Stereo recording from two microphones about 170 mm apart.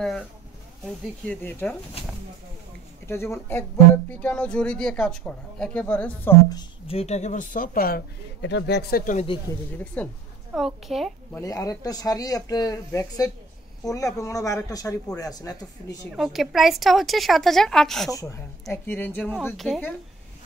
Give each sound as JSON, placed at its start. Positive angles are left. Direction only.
{"t": 1.2, "sound": "speech", "side_deg": 10}
{"t": 3.1, "sound": "speech", "side_deg": 15}
{"t": 6.9, "sound": "speech", "side_deg": 40}
{"t": 10.0, "sound": "a woman's voice", "side_deg": 10}
{"t": 11.4, "sound": "speech", "side_deg": 20}
{"t": 16.1, "sound": "a woman's voice", "side_deg": 0}